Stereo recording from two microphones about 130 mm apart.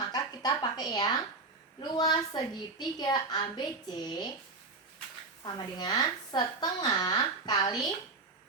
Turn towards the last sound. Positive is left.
turn(degrees=30)  # may be behind; listen again after turning